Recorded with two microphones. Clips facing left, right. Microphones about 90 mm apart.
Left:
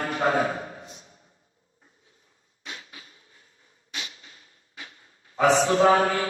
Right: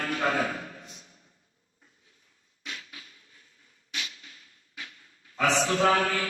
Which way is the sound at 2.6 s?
25° left (ahead or behind).